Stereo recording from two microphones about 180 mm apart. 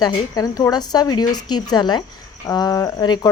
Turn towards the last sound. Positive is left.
turn(degrees=25)  # may be behind; listen again after turning